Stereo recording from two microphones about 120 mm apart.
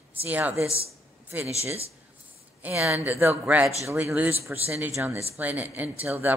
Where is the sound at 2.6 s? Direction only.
15° right (ahead or behind).